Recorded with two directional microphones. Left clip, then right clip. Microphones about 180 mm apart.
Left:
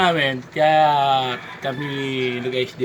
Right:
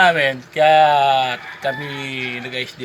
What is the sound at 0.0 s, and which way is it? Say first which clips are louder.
Speech: right 4 dB; centre (ahead or behind).